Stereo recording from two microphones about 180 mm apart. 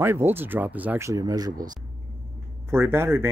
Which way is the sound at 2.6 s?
15° right (ahead or behind).